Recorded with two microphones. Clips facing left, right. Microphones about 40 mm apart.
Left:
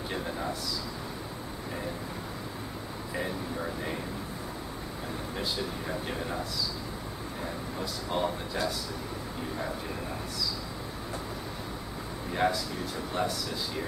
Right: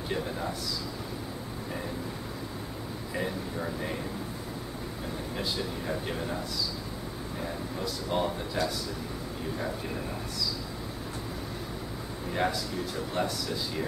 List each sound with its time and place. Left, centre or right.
7.8 s speech: centre
12.4 s speech: centre